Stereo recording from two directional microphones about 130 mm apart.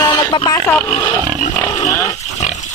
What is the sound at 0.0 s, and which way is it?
Vehicle, 35° left (ahead or behind).